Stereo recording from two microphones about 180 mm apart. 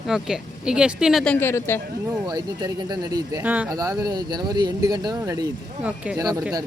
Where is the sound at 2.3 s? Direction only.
20° right (ahead or behind).